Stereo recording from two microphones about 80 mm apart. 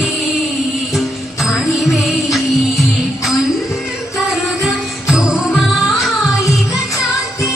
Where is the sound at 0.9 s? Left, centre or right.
Centre.